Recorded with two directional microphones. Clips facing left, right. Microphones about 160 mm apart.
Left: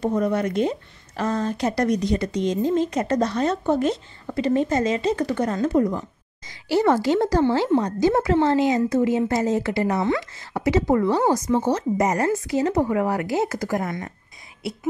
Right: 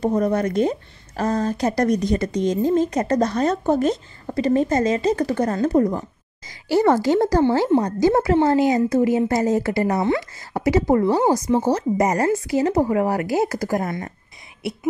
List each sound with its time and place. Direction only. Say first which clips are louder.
0.0 s a woman's voice: right 2 dB; 40° right (ahead or behind)